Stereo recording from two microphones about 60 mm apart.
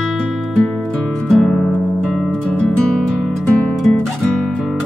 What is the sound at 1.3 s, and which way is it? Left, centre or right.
Music, centre.